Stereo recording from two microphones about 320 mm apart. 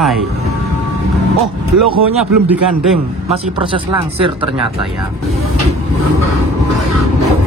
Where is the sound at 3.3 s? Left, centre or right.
Centre.